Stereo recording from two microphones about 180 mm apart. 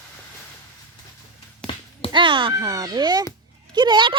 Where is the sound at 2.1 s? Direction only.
25° right (ahead or behind).